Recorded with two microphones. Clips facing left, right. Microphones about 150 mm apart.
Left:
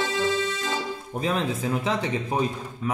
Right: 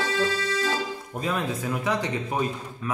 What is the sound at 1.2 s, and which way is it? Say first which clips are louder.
Music: left 2 dB; 25° left (ahead or behind).